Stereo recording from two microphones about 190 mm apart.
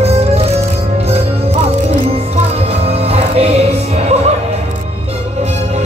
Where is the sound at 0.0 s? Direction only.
35° right (ahead or behind).